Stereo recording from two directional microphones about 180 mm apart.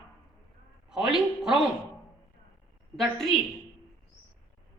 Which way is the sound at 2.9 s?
Centre (ahead or behind).